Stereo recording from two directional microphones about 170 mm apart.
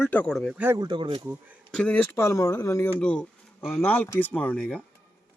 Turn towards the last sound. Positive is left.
turn(degrees=5)  # may be behind; listen again after turning